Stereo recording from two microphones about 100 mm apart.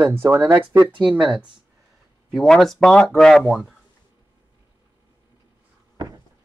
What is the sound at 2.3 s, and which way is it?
Speech, 5° left (ahead or behind).